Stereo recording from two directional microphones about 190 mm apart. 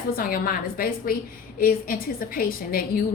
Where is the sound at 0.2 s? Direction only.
50° left (ahead or behind).